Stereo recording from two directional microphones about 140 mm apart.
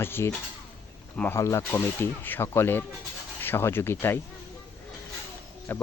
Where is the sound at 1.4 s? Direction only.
20° left (ahead or behind).